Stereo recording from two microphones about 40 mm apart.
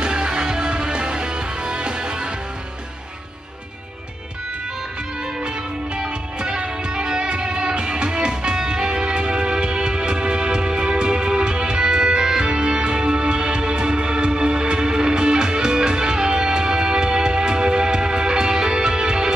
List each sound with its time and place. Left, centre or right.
0.0 s music: right
5.9 s music: right